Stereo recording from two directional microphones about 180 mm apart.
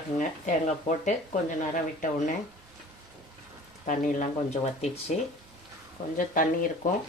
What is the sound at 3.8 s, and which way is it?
Speech, 45° left (ahead or behind).